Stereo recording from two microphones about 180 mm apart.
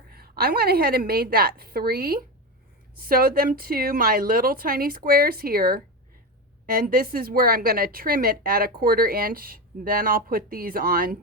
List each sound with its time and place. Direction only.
0.1 s a woman's voice: 60° right (ahead or behind)